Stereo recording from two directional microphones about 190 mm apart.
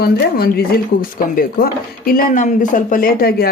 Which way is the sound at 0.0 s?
55° left (ahead or behind).